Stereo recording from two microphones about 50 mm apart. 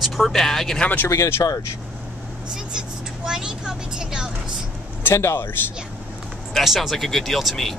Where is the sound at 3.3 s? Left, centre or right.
Centre.